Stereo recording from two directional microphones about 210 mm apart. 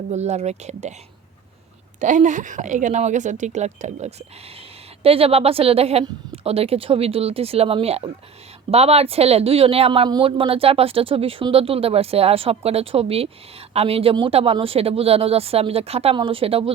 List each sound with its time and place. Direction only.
0.1 s a woman's voice: 30° right (ahead or behind)
2.0 s a woman's voice: 35° right (ahead or behind)